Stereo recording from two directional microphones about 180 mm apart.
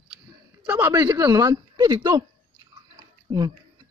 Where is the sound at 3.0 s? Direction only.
25° right (ahead or behind).